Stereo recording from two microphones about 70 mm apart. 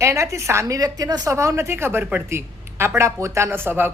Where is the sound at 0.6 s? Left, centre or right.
Right.